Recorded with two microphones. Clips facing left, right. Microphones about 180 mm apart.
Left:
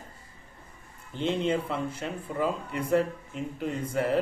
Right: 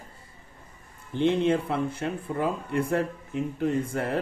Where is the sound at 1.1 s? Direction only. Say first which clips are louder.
Right 4 dB; 60° right (ahead or behind).